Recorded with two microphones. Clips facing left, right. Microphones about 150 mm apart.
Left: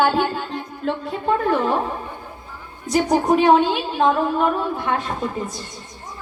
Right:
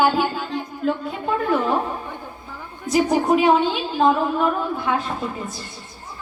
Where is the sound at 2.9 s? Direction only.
5° right (ahead or behind).